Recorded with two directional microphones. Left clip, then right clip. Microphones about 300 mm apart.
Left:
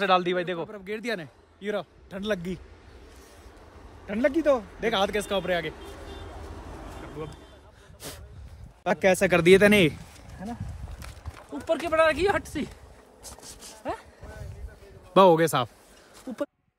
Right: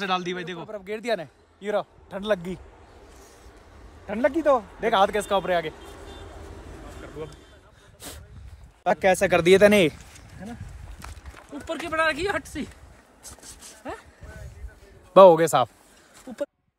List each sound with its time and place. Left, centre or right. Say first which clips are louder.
0.0 s speech: left 4 dB; centre
0.7 s a man's voice: right 4 dB; centre
4.1 s a man's voice: right 2 dB; centre
6.7 s vehicle: even; left
8.8 s speech: right 2 dB; centre
10.4 s speech: left 3 dB; left
13.2 s dog: even; centre
15.1 s a man's voice: right 5 dB; centre